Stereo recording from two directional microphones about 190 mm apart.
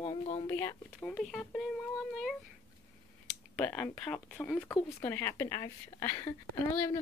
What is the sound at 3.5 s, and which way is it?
Speech, 5° left (ahead or behind).